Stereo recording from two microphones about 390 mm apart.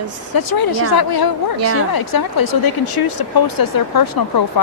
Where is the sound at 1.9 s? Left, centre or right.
Left.